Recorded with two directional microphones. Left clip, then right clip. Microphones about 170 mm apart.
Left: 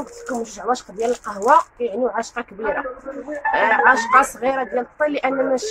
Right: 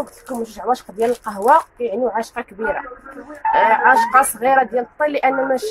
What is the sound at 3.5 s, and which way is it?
Speech, 25° right (ahead or behind).